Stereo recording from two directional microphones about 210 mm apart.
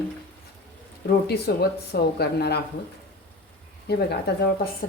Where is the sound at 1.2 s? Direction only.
50° left (ahead or behind).